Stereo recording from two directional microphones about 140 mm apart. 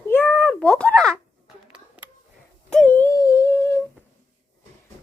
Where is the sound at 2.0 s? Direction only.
10° right (ahead or behind).